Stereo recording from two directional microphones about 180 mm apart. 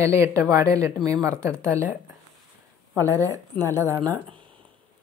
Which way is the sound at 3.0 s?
15° right (ahead or behind).